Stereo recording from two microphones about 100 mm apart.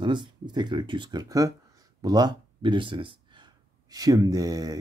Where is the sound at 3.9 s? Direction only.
40° right (ahead or behind).